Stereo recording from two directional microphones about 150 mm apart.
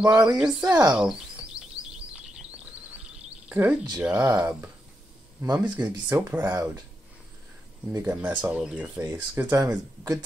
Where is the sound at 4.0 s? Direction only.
10° right (ahead or behind).